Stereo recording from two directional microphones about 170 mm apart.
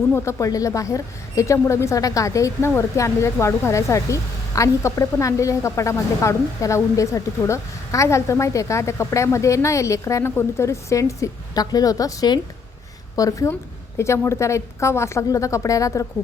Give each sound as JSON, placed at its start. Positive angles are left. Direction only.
{"t": 0.1, "sound": "a woman's voice", "side_deg": 15}